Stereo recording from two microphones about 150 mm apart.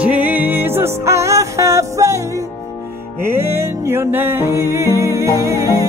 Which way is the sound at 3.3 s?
15° right (ahead or behind).